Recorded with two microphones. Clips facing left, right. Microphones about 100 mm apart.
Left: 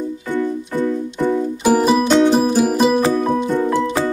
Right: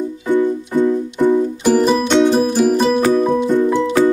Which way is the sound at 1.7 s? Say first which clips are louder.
Even; 5° left (ahead or behind).